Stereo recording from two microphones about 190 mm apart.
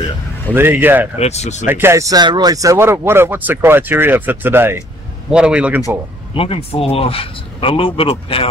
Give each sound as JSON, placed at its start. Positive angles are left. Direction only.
{"t": 0.6, "sound": "speech", "side_deg": -10}
{"t": 1.1, "sound": "speech", "side_deg": 35}
{"t": 1.7, "sound": "speech", "side_deg": -15}
{"t": 6.3, "sound": "speech", "side_deg": 30}